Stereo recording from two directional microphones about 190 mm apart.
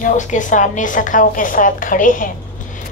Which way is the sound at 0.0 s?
40° left (ahead or behind).